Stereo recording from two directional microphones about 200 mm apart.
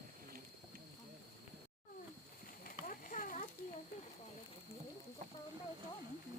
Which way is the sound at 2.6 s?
40° left (ahead or behind).